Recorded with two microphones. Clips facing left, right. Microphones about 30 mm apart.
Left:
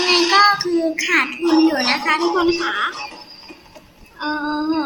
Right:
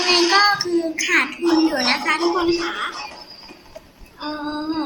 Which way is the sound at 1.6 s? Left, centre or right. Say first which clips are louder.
Left 2 dB; centre.